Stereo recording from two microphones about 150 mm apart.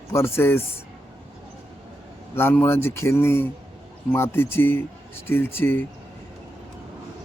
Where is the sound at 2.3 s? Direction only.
15° left (ahead or behind).